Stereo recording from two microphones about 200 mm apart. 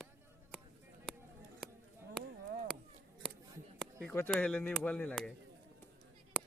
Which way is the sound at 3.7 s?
5° left (ahead or behind).